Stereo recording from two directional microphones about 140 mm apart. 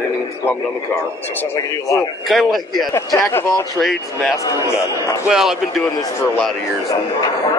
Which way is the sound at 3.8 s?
Centre (ahead or behind).